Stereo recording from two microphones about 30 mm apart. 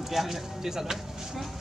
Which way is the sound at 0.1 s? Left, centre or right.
Centre.